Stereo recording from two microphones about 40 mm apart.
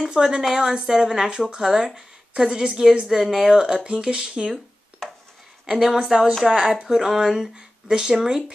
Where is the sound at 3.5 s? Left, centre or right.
Right.